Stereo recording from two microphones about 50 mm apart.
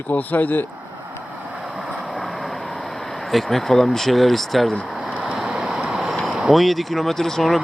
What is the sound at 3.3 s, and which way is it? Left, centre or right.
Speech, centre.